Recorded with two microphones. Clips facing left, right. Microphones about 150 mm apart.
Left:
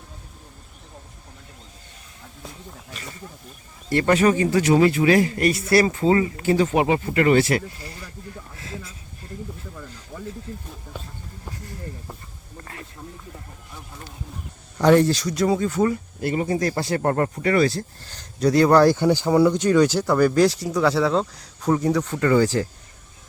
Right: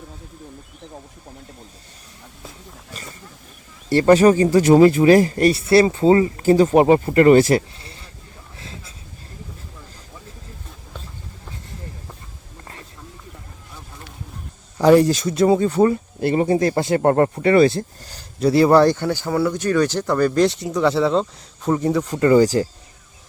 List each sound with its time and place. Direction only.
3.8 s speech: 30° right (ahead or behind)
7.8 s a sound: 25° right (ahead or behind)
14.8 s speech: 10° right (ahead or behind)
15.1 s speech: 25° right (ahead or behind)
18.1 s speech: 5° right (ahead or behind)
18.9 s speech: 15° left (ahead or behind); by 22.1 s 5° right (ahead or behind)